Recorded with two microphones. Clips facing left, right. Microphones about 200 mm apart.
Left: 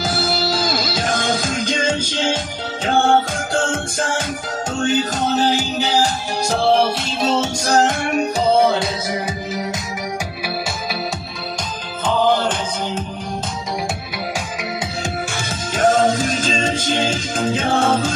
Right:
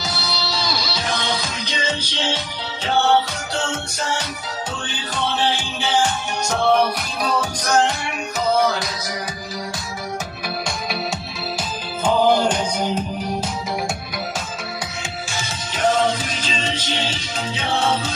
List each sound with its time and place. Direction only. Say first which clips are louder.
0.0 s music: left 7 dB; 50° left (ahead or behind); by 7.8 s 30° left (ahead or behind)
7.8 s music: left 5 dB; 45° left (ahead or behind)
8.4 s music: left 2 dB; 30° left (ahead or behind)
12.1 s music: right 1 dB; 10° right (ahead or behind)
15.7 s music: left 4 dB; 45° left (ahead or behind)